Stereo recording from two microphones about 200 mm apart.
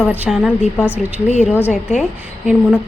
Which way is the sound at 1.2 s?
35° left (ahead or behind).